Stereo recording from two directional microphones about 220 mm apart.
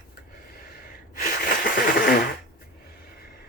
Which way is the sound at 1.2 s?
40° left (ahead or behind).